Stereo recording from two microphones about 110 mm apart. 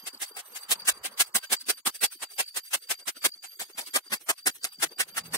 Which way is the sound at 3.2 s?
30° left (ahead or behind).